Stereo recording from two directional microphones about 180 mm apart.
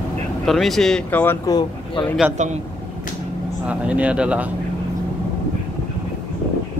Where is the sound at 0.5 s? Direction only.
Centre (ahead or behind); by 2.0 s 20° left (ahead or behind).